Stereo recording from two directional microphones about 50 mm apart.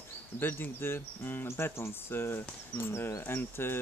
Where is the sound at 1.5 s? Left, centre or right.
Left.